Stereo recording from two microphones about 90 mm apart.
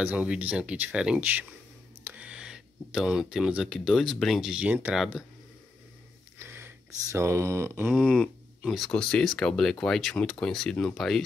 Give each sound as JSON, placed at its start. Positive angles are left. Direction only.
{"t": 0.0, "sound": "speech", "side_deg": -15}
{"t": 6.3, "sound": "a sound", "side_deg": -25}
{"t": 7.1, "sound": "mantra", "side_deg": -30}
{"t": 7.9, "sound": "speech", "side_deg": 10}